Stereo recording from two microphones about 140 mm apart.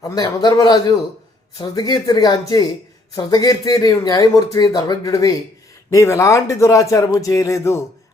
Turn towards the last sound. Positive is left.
turn(degrees=20)  # may be behind; listen again after turning